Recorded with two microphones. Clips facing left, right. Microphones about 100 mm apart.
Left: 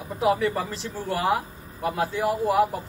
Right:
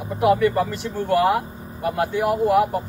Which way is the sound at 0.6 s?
65° right (ahead or behind).